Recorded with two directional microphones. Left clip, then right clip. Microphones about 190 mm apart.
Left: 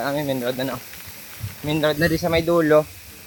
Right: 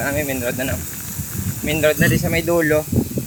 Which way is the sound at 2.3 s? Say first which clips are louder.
Left 3 dB; 10° left (ahead or behind).